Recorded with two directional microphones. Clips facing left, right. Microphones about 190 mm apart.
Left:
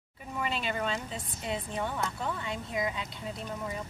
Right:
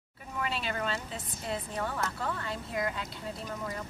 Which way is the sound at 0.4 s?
Centre (ahead or behind).